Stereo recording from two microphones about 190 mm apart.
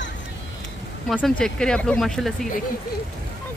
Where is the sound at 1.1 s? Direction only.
Centre (ahead or behind).